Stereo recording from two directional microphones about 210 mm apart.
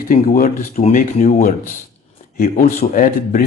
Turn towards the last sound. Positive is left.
turn(degrees=40)  # may be behind; listen again after turning